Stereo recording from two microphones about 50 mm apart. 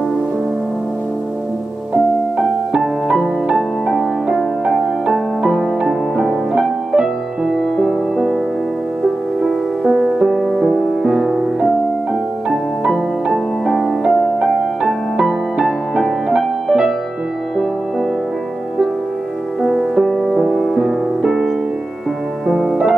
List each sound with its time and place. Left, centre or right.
2.8 s music: centre
5.4 s music: centre
7.5 s music: centre
9.4 s music: centre
12.9 s music: centre
15.6 s music: centre
19.6 s music: centre
22.5 s music: centre